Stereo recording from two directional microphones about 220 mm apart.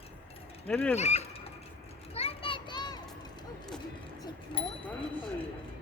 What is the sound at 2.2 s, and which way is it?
Children playing, 25° left (ahead or behind).